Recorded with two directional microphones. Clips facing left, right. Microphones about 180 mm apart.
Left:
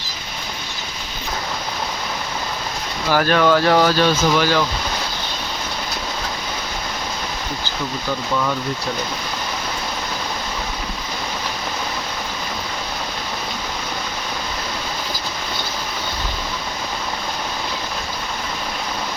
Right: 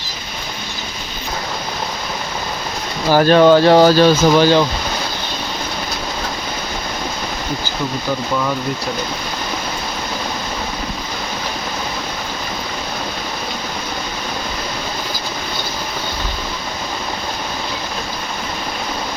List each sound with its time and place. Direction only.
3.1 s speech: 30° right (ahead or behind)